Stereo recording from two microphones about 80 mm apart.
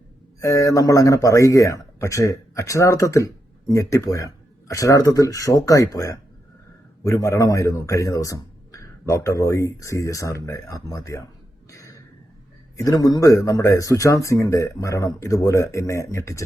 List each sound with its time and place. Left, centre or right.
0.3 s speech: left
11.7 s a sound: left
12.7 s speech: left